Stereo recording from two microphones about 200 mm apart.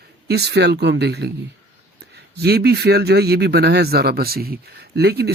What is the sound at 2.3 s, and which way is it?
Speech, 55° right (ahead or behind).